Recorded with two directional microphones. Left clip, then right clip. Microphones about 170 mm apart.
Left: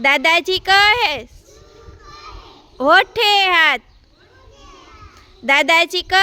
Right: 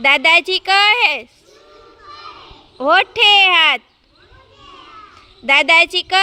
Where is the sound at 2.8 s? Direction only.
30° left (ahead or behind).